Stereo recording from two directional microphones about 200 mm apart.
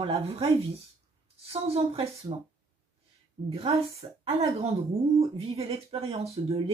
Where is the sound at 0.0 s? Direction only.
30° right (ahead or behind).